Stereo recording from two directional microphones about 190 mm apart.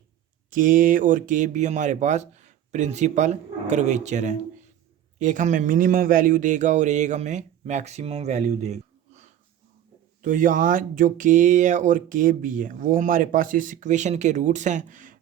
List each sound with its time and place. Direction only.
0.5 s speech: 45° right (ahead or behind)